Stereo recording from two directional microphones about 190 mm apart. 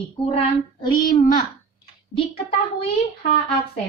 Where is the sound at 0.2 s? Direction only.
25° left (ahead or behind).